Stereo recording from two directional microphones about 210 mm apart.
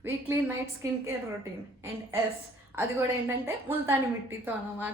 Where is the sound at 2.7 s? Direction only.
10° right (ahead or behind).